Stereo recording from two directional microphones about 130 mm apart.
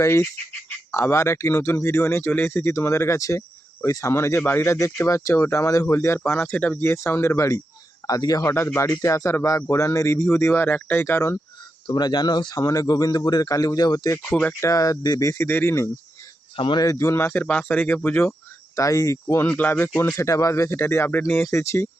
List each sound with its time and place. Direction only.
0.0 s speech: 20° left (ahead or behind)
11.9 s speech: 35° left (ahead or behind)
16.6 s speech: 40° left (ahead or behind)
16.8 s speech: 25° left (ahead or behind)
19.5 s speech: 10° left (ahead or behind)